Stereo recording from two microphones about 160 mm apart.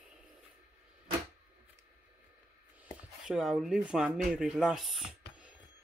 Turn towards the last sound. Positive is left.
turn(degrees=0)  # may be behind; listen again after turning